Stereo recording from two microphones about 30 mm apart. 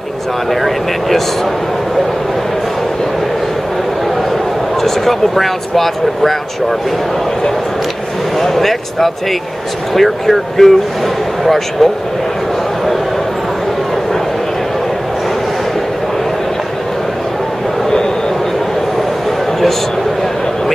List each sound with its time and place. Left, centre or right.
4.8 s speech: centre
8.4 s speech: centre